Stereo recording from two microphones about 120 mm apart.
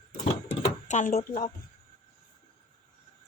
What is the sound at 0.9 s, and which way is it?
Speech, 90° left.